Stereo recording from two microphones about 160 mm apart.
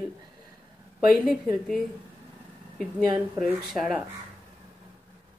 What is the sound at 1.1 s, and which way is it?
Speech, centre (ahead or behind).